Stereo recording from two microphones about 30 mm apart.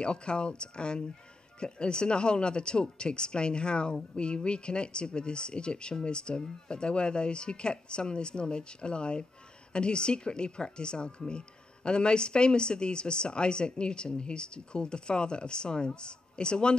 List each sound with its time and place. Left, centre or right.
0.0 s speech: left